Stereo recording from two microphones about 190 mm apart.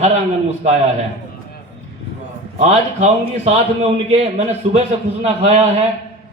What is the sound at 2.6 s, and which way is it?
A man's voice, 35° right (ahead or behind).